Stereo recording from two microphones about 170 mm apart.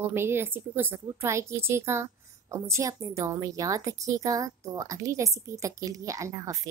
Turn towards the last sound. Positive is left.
turn(degrees=-20)  # may be behind; listen again after turning